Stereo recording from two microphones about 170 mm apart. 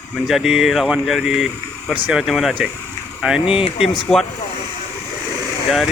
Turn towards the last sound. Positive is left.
turn(degrees=0)  # may be behind; listen again after turning